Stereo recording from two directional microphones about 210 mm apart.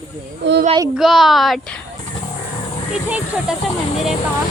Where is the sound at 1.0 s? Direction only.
Centre (ahead or behind).